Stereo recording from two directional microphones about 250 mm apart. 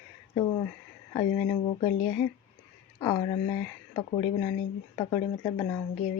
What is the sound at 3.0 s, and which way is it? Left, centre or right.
A woman's voice, centre.